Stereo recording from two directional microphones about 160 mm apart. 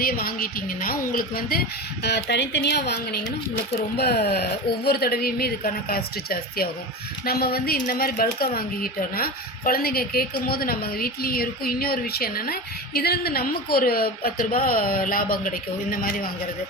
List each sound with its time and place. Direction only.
0.0 s speech: 70° left (ahead or behind)
2.0 s speech: 90° left; by 16.3 s 65° left (ahead or behind)